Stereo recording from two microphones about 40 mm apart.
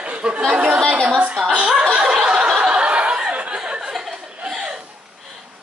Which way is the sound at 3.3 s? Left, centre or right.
Right.